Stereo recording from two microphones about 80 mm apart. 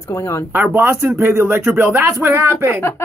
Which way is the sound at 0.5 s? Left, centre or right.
Right.